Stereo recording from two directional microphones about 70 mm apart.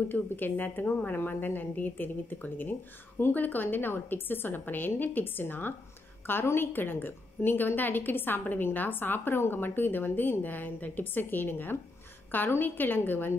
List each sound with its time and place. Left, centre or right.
0.1 s a woman's voice: left